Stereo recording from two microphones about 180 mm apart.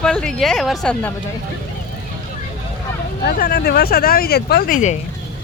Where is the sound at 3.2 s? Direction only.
60° left (ahead or behind).